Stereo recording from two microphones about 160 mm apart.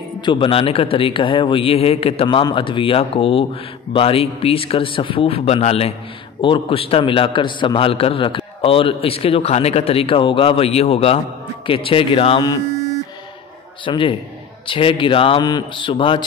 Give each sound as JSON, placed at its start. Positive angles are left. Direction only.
{"t": 0.2, "sound": "a man's voice", "side_deg": 30}
{"t": 13.8, "sound": "a man's voice", "side_deg": 35}